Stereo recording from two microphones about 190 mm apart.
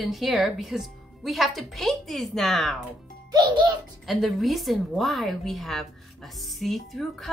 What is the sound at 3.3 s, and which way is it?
Speech, 20° right (ahead or behind).